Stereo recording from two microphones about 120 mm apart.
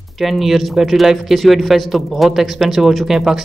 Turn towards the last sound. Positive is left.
turn(degrees=-5)  # may be behind; listen again after turning